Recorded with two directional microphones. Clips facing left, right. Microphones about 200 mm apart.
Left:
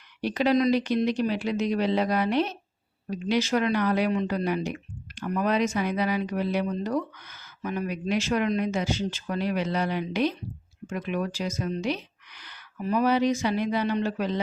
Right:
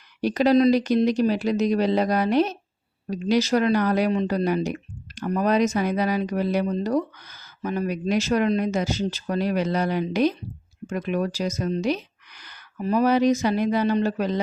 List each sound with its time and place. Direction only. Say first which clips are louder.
0.2 s speech: right 5 dB; 40° right (ahead or behind)